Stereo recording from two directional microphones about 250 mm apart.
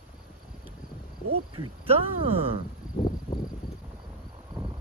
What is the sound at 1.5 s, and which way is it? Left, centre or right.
Speech, right.